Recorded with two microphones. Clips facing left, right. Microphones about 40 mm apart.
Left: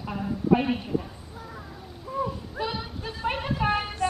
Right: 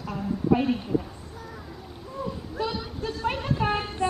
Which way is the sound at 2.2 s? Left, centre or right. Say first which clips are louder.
Right 2 dB; centre.